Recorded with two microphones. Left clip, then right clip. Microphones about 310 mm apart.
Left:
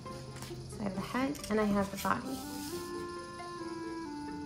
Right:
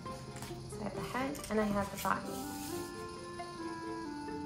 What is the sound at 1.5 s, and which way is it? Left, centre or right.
Speech, left.